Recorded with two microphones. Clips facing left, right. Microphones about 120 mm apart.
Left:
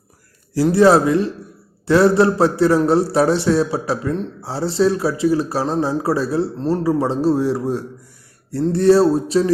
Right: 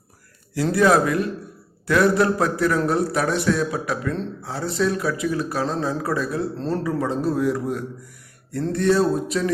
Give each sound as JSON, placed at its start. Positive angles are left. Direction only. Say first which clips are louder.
{"t": 0.7, "sound": "a man's voice", "louder": "left 5 dB", "side_deg": 30}